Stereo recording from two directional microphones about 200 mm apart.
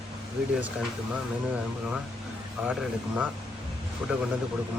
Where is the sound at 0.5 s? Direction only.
5° right (ahead or behind).